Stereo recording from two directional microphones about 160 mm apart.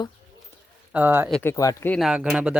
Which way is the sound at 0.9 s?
10° right (ahead or behind).